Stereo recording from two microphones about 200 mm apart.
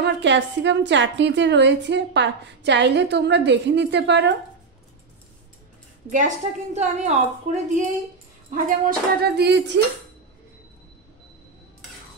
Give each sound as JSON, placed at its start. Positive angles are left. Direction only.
{"t": 0.0, "sound": "a woman's voice", "side_deg": -60}
{"t": 6.0, "sound": "a woman's voice", "side_deg": -40}